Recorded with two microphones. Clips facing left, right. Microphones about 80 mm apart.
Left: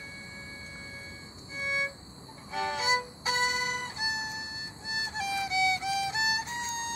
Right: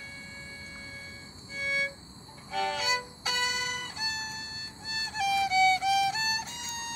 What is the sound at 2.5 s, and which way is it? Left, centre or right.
Music, left.